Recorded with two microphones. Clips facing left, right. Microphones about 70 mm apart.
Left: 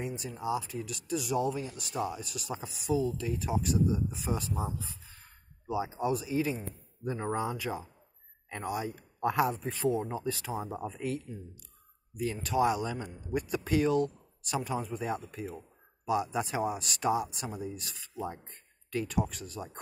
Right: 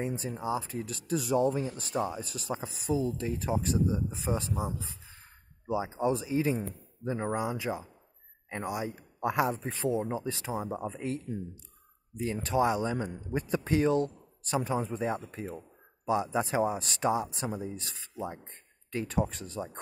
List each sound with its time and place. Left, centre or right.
0.0 s speech: right
7.2 s speech: centre; by 19.8 s right